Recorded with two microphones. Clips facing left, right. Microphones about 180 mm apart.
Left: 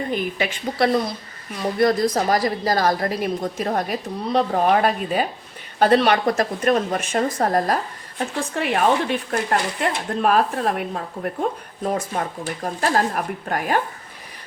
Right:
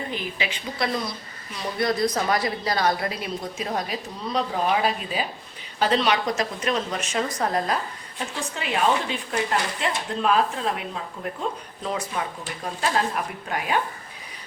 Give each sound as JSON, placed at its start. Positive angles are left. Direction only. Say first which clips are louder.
{"t": 0.1, "sound": "speech", "louder": "left 6 dB", "side_deg": 50}
{"t": 8.5, "sound": "speech", "louder": "left 4 dB", "side_deg": 60}